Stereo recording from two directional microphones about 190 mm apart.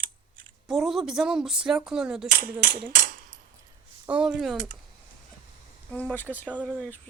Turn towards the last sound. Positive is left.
turn(degrees=10)  # may be behind; listen again after turning